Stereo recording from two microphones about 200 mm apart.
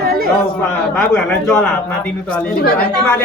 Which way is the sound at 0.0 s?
50° right (ahead or behind).